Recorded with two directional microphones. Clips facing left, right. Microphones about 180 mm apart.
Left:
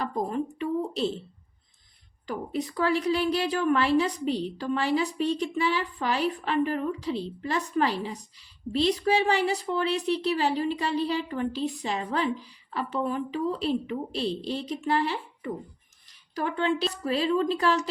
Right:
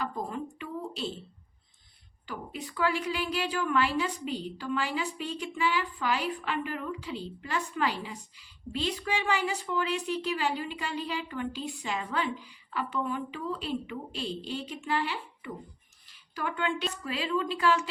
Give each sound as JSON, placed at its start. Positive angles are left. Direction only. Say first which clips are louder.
{"t": 0.0, "sound": "speech", "louder": "left 5 dB", "side_deg": 35}
{"t": 2.2, "sound": "a woman's voice", "louder": "left 8 dB", "side_deg": 40}